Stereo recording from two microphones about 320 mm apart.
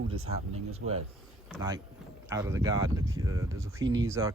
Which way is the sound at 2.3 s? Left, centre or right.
Centre.